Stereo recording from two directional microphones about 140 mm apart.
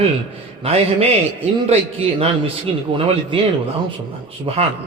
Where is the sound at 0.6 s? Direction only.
45° right (ahead or behind).